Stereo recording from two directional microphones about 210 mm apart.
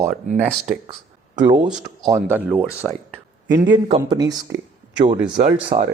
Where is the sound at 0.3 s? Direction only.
35° right (ahead or behind).